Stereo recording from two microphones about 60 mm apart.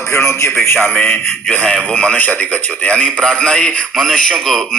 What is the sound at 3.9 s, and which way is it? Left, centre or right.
Speech, centre.